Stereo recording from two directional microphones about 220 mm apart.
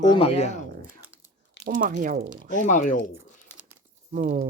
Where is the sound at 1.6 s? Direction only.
40° right (ahead or behind).